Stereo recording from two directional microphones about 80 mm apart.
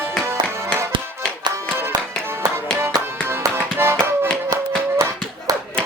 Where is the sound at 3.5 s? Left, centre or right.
Right.